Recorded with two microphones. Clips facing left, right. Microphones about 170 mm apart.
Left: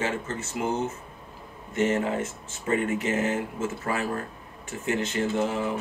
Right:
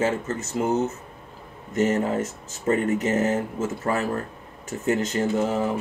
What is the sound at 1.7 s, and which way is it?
Speech, 40° right (ahead or behind).